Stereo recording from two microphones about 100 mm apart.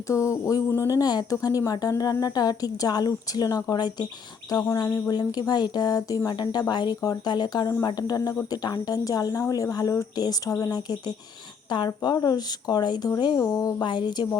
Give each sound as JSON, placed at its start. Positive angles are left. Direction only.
{"t": 0.1, "sound": "a woman's voice", "side_deg": 30}
{"t": 4.5, "sound": "a woman's voice", "side_deg": 30}
{"t": 11.9, "sound": "speech", "side_deg": 45}
{"t": 13.4, "sound": "a woman's voice", "side_deg": 35}
{"t": 13.8, "sound": "speech", "side_deg": 50}